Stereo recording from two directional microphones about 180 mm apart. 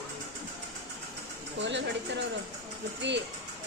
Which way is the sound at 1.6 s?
80° right.